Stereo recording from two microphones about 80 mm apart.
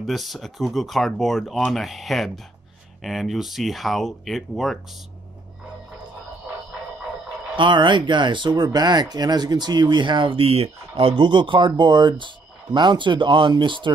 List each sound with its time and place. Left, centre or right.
0.0 s speech: centre
7.5 s speech: right